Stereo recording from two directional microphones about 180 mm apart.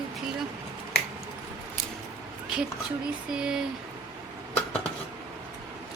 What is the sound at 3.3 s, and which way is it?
Speech, 5° right (ahead or behind).